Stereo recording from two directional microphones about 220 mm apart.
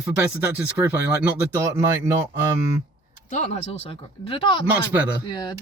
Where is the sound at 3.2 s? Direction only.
35° left (ahead or behind).